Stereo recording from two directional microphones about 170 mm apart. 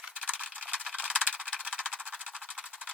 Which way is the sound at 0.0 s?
5° right (ahead or behind).